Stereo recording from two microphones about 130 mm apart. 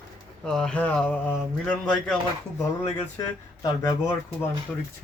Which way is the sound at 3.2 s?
25° left (ahead or behind).